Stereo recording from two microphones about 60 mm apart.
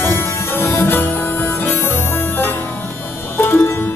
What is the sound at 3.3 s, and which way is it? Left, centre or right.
Music, left.